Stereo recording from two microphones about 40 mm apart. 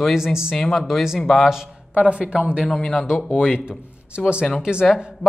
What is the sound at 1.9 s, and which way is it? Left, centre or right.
Speech, right.